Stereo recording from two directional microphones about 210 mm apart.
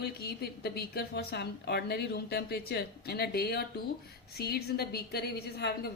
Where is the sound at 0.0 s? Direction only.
50° left (ahead or behind).